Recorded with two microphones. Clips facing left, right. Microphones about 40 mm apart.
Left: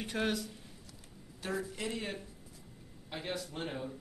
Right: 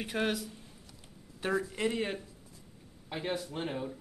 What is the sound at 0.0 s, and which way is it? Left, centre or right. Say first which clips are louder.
Speech: right 2 dB; centre.